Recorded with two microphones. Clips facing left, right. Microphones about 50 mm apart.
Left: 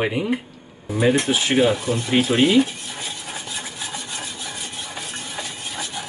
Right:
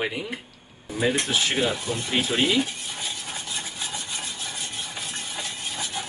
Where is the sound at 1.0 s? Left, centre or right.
Centre.